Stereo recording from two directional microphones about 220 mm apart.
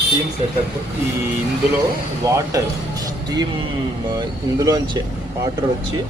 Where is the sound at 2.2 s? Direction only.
15° right (ahead or behind).